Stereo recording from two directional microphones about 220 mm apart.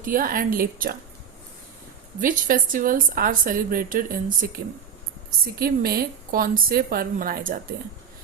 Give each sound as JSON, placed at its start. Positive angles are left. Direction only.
{"t": 0.0, "sound": "a woman's voice", "side_deg": -40}
{"t": 2.2, "sound": "a woman's voice", "side_deg": -40}